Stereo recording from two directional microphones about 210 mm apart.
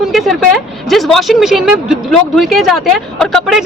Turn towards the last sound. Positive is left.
turn(degrees=0)  # may be behind; listen again after turning